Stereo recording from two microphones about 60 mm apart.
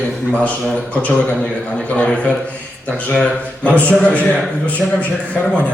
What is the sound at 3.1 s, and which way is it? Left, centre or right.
A man's voice, centre.